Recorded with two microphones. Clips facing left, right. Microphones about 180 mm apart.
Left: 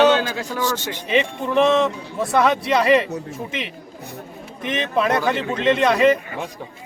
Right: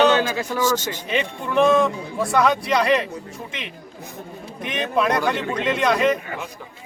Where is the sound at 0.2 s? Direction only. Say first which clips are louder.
Right 2 dB; 10° right (ahead or behind).